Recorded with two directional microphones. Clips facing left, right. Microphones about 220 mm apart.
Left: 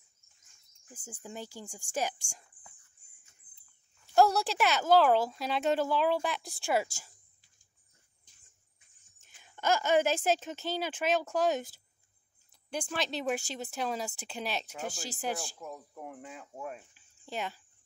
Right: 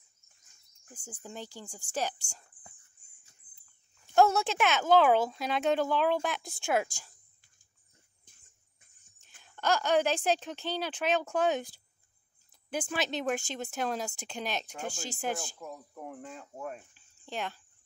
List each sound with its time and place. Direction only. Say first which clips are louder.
0.9 s speech: even; 10° left (ahead or behind)
4.1 s speech: right 1 dB; centre (ahead or behind)
8.3 s a sound: right 8 dB; 50° right (ahead or behind)
9.4 s speech: even; 10° left (ahead or behind)
12.6 s speech: right 2 dB; 5° right (ahead or behind)